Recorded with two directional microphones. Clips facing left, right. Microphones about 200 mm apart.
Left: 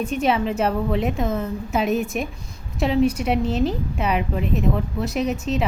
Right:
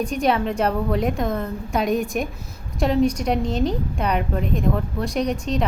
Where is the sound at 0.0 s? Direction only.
Centre (ahead or behind).